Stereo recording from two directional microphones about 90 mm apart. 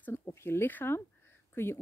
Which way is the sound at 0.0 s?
25° left (ahead or behind).